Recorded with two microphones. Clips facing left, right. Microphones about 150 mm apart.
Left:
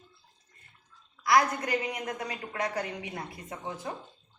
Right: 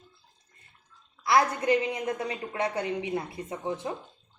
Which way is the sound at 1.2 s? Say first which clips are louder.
Right 1 dB; 25° right (ahead or behind).